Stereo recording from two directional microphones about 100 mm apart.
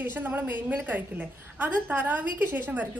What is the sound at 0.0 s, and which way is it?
A woman's voice, 20° right (ahead or behind).